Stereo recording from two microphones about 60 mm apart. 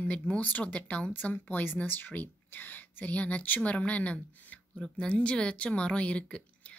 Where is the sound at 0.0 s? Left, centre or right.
Left.